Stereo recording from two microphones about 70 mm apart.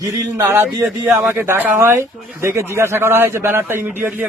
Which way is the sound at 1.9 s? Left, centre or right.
Right.